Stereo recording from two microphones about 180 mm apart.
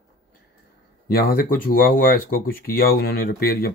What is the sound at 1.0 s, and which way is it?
Speech, 60° left (ahead or behind).